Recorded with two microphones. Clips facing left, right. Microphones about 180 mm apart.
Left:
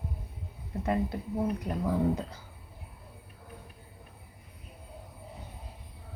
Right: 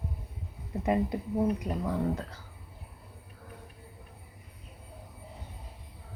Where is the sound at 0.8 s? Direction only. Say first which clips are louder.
Right 2 dB; 20° right (ahead or behind).